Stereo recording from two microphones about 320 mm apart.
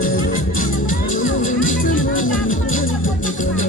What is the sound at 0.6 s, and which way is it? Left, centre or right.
Music, left.